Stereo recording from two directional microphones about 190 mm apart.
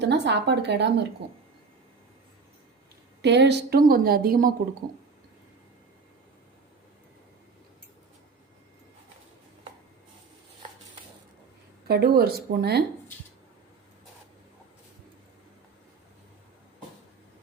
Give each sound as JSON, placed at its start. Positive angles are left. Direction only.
{"t": 0.0, "sound": "a woman's voice", "side_deg": -65}
{"t": 3.2, "sound": "a woman's voice", "side_deg": -65}
{"t": 11.9, "sound": "a woman's voice", "side_deg": -55}